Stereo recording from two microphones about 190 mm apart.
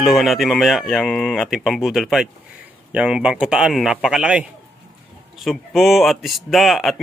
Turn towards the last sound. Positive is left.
turn(degrees=0)  # may be behind; listen again after turning